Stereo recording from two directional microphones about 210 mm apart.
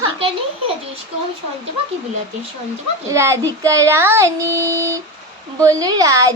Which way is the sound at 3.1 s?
10° right (ahead or behind).